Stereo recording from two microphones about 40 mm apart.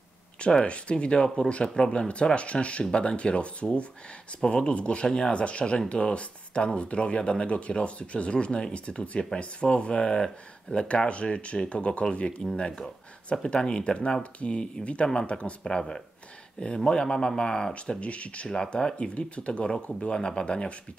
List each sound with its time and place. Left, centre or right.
0.4 s speech: left
18.0 s speech: left